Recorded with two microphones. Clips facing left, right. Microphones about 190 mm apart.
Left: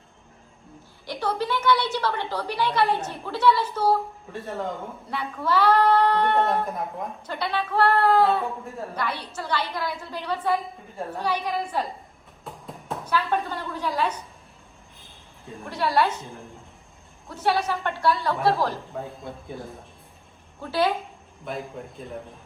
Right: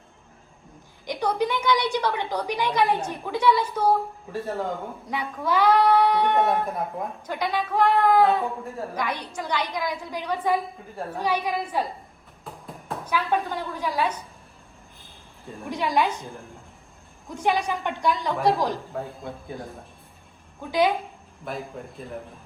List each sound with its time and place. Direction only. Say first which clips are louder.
1.0 s a woman's voice: right 2 dB; 15° right (ahead or behind)
4.4 s speech: right 3 dB; centre (ahead or behind)
5.0 s a woman's voice: even; 15° right (ahead or behind)
12.5 s music: left 1 dB; centre (ahead or behind)
13.1 s a woman's voice: even; 10° right (ahead or behind)
15.4 s speech: right 2 dB; centre (ahead or behind)
15.7 s a woman's voice: left 1 dB; 15° right (ahead or behind)
17.2 s a woman's voice: even; 15° right (ahead or behind)
18.9 s speech: right 1 dB; centre (ahead or behind)
20.6 s a woman's voice: right 2 dB; 15° right (ahead or behind)
21.4 s speech: even; centre (ahead or behind)